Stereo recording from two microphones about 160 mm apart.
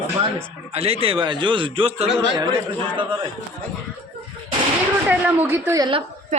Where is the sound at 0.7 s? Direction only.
40° right (ahead or behind).